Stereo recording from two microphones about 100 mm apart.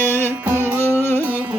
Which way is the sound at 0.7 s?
25° left (ahead or behind).